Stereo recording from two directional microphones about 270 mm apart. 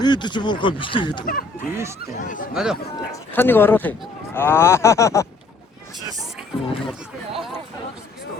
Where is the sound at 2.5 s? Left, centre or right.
Centre.